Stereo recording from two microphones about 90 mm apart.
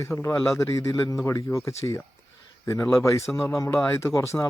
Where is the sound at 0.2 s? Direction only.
30° left (ahead or behind).